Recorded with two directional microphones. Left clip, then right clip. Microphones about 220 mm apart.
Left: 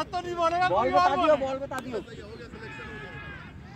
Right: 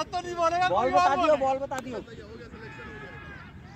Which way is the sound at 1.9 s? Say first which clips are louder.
Left 3 dB; 30° left (ahead or behind).